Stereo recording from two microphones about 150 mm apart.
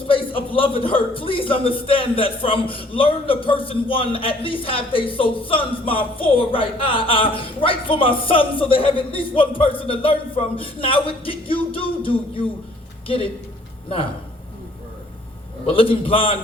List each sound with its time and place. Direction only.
0.1 s a man's voice: 35° left (ahead or behind)
15.6 s a man's voice: 40° left (ahead or behind)